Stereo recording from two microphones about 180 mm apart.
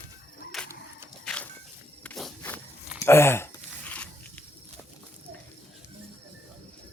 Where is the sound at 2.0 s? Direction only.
5° left (ahead or behind).